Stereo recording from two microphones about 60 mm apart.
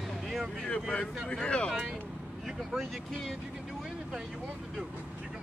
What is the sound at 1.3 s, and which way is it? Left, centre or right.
Speech, centre.